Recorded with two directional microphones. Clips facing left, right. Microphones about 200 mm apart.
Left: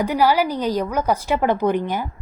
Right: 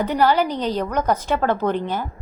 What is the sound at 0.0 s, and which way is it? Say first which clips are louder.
A woman's voice: even; 10° left (ahead or behind).